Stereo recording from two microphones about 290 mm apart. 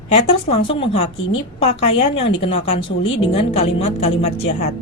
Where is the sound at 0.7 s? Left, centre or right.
Left.